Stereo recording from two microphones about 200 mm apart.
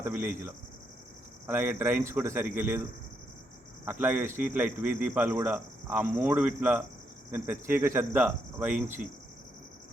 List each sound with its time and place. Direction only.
0.0 s speech: 10° right (ahead or behind)
4.0 s speech: 10° right (ahead or behind)